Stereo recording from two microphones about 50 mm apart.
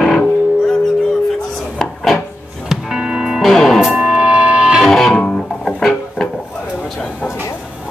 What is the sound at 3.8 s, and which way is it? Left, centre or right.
Music, centre.